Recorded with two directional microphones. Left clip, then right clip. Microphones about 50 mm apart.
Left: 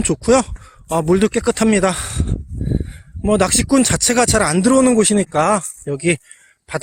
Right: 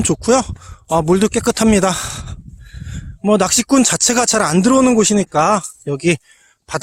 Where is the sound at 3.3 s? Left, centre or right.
Right.